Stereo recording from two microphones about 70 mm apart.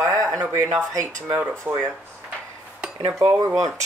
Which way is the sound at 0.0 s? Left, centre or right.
Right.